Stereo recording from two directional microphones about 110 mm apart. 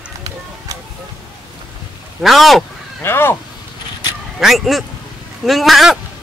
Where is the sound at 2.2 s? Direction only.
Centre (ahead or behind).